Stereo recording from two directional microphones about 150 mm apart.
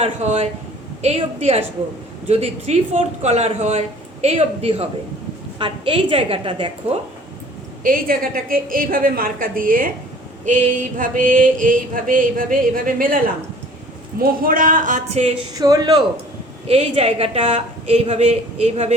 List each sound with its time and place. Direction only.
0.0 s a woman's voice: 45° right (ahead or behind)
7.9 s a woman's voice: 70° right (ahead or behind)
10.4 s a sound: 55° right (ahead or behind)
14.2 s a sound: 70° right (ahead or behind); by 15.3 s 50° right (ahead or behind)
15.5 s a man's voice: 25° right (ahead or behind)
16.6 s speech: 40° right (ahead or behind)